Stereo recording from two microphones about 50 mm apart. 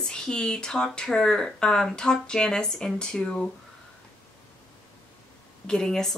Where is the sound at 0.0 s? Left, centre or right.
Centre.